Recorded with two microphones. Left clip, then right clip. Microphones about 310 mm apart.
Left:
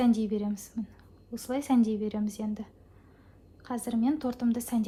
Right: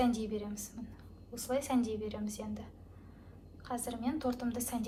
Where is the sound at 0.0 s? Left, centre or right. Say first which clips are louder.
Left 5 dB; left.